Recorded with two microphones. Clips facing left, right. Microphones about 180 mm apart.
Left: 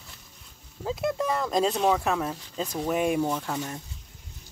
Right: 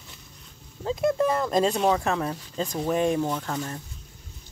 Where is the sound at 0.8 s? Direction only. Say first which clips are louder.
Right 4 dB; 5° left (ahead or behind).